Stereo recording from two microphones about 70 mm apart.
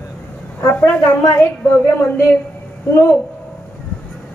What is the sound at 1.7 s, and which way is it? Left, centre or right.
Speech, left.